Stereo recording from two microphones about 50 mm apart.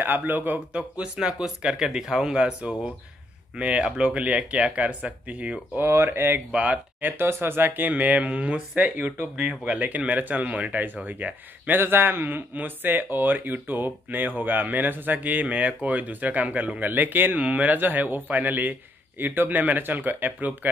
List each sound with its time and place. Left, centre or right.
0.0 s a man's voice: right
0.7 s speech: right
5.8 s speech: right
6.5 s speech: right
7.0 s speech: right
7.9 s a man's voice: right
9.4 s speech: right
9.8 s a man's voice: right
11.8 s a man's voice: right
17.4 s a man's voice: right